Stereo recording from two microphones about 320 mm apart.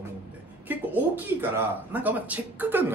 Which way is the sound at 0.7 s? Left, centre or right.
Centre.